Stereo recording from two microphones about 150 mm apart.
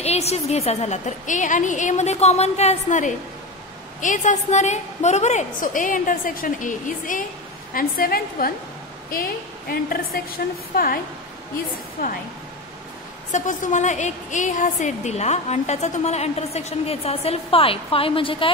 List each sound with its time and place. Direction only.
0.0 s a woman's voice: 45° left (ahead or behind); by 7.2 s 60° left (ahead or behind)
7.7 s a woman's voice: 75° left (ahead or behind)
9.7 s a woman's voice: 80° left
13.3 s a woman's voice: 55° left (ahead or behind); by 18.5 s 35° left (ahead or behind)